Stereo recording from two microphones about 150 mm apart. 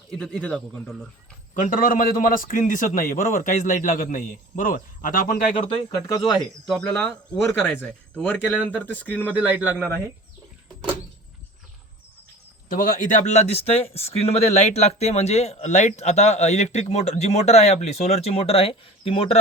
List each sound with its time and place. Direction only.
0.1 s speech: centre (ahead or behind)
1.5 s a man's voice: 60° left (ahead or behind)
6.7 s speech: 5° left (ahead or behind)
7.4 s speech: 15° left (ahead or behind)
9.3 s speech: 10° right (ahead or behind)
12.6 s speech: 65° left (ahead or behind); by 19.4 s 40° left (ahead or behind)